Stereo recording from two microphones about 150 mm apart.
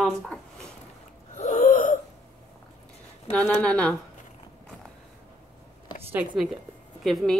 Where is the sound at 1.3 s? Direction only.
55° left (ahead or behind).